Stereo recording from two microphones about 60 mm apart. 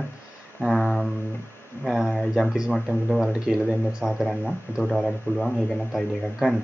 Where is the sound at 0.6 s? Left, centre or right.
Centre.